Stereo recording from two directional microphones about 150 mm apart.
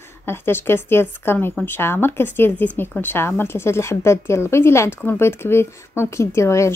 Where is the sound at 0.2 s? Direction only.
15° left (ahead or behind).